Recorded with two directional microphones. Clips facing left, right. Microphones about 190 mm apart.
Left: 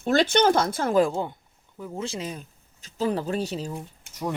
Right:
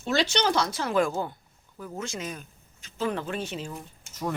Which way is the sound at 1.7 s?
20° left (ahead or behind).